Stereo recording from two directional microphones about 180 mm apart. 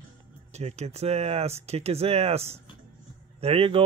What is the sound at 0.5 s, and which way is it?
Speech, 35° right (ahead or behind).